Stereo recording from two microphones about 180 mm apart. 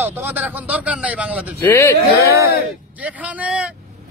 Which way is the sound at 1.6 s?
15° left (ahead or behind).